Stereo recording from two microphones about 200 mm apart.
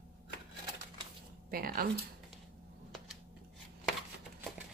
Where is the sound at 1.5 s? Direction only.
45° right (ahead or behind).